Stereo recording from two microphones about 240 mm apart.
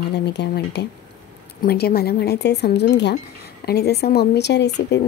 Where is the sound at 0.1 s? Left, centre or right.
Left.